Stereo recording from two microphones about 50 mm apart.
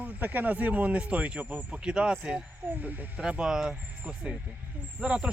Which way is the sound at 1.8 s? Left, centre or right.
Centre.